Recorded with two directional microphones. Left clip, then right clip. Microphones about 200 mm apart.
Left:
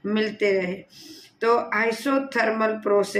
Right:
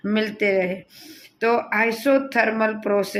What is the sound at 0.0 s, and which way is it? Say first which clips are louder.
Speech: right 1 dB; 35° right (ahead or behind).